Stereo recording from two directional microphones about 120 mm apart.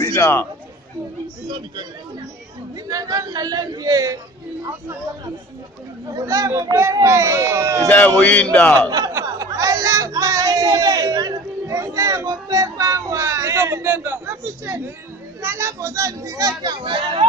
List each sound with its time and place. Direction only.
0.0 s a man's voice: 20° left (ahead or behind)
2.9 s speech: 30° right (ahead or behind)
6.0 s speech: 30° right (ahead or behind)
8.2 s speech: 15° left (ahead or behind)
8.7 s speech: 30° right (ahead or behind)